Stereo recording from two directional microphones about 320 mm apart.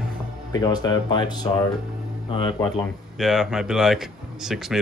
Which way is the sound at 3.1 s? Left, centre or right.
Centre.